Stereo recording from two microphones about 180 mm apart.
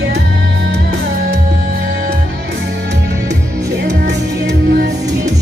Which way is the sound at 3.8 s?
70° right (ahead or behind).